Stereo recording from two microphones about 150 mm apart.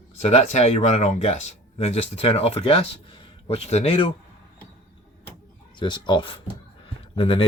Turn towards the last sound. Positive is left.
turn(degrees=40)  # may be behind; listen again after turning